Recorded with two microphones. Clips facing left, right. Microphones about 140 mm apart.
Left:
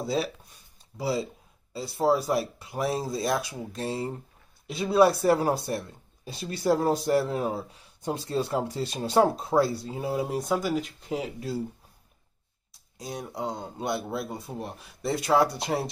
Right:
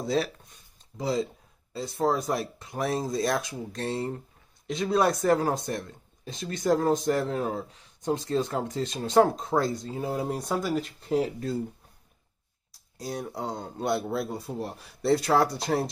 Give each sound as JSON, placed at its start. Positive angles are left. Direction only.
{"t": 0.0, "sound": "speech", "side_deg": 5}
{"t": 12.9, "sound": "speech", "side_deg": 0}